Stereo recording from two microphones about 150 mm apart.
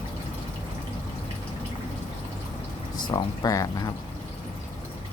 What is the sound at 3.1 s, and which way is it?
Speech, 25° left (ahead or behind).